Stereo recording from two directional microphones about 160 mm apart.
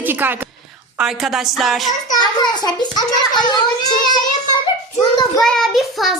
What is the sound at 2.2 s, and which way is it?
A child's voice, 25° left (ahead or behind).